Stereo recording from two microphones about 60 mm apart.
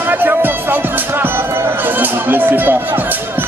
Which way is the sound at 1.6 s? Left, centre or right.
Right.